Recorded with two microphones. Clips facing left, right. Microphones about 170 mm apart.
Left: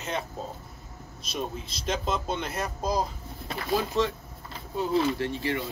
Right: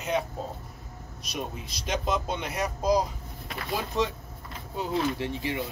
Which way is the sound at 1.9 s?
10° right (ahead or behind).